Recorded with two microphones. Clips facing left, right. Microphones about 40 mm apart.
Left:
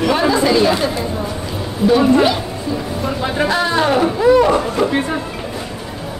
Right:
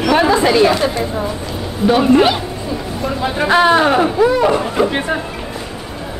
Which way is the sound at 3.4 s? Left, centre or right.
Right.